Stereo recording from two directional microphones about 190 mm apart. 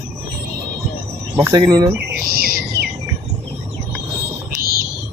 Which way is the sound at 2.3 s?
50° right (ahead or behind).